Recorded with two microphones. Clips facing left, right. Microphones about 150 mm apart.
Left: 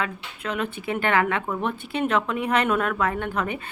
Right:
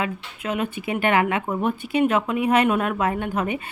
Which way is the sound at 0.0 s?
15° right (ahead or behind).